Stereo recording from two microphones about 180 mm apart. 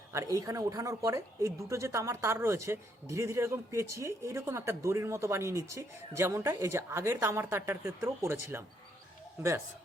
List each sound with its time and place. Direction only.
0.1 s speech: 15° right (ahead or behind)